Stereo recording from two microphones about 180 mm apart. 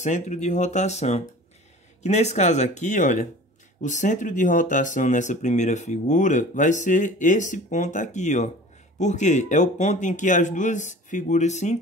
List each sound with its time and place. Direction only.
0.0 s speech: 40° left (ahead or behind)